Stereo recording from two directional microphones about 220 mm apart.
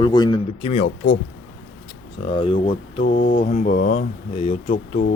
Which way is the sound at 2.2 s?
25° left (ahead or behind).